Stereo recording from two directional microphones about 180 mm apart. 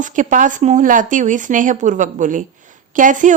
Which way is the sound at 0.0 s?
45° right (ahead or behind).